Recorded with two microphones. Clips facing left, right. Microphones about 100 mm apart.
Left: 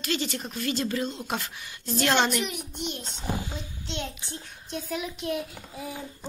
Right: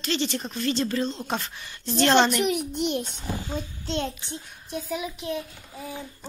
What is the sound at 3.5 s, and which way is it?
Speech, 40° right (ahead or behind).